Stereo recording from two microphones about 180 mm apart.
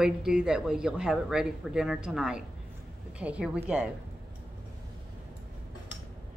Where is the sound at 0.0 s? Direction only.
5° right (ahead or behind).